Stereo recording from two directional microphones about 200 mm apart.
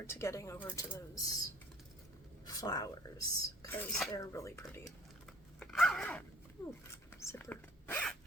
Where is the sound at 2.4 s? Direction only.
20° left (ahead or behind).